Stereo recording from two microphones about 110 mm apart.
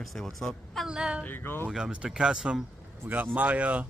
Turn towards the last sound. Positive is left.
turn(degrees=-15)  # may be behind; listen again after turning